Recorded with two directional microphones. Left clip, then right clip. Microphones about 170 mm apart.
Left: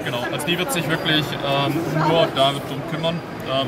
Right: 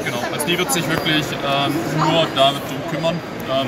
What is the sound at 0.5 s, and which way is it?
Speech, 50° left (ahead or behind).